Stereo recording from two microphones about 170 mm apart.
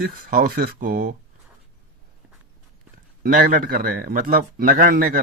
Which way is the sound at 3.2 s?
60° right (ahead or behind).